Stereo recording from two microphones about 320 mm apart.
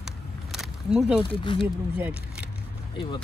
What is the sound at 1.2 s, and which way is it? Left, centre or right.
Speech, centre.